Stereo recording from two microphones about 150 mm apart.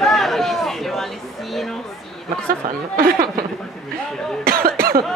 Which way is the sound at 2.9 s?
75° right (ahead or behind).